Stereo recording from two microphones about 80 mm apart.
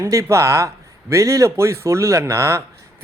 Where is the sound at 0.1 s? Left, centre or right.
Right.